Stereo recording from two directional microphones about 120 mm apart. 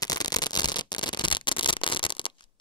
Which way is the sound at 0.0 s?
35° left (ahead or behind).